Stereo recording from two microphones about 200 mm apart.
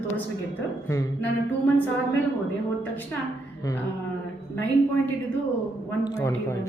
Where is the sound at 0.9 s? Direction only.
15° left (ahead or behind).